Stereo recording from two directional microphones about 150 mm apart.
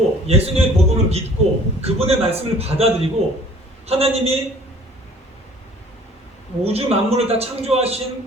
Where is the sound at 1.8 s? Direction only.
45° right (ahead or behind).